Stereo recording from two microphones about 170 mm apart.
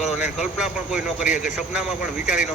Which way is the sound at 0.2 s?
5° right (ahead or behind).